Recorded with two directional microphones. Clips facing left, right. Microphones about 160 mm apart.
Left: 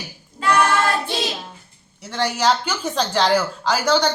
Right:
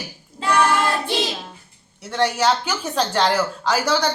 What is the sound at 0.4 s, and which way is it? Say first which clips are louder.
Female singing: left 2 dB; 25° right (ahead or behind).